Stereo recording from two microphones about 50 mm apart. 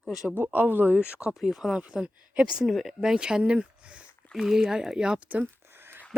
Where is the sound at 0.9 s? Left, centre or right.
Right.